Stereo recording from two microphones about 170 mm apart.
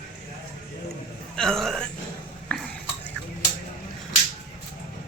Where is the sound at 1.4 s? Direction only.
5° left (ahead or behind).